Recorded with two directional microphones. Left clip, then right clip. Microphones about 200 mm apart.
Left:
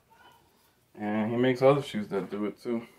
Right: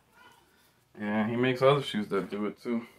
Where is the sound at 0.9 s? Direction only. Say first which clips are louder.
Left 1 dB; 25° left (ahead or behind).